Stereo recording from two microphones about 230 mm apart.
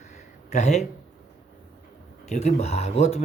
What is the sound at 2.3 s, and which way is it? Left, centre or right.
Speech, left.